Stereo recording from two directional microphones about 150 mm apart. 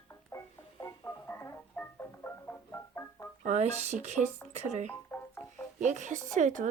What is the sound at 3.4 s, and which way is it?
Speech, 50° right (ahead or behind).